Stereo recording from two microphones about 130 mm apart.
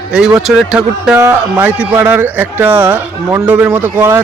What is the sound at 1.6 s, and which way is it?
A man's voice, 10° right (ahead or behind).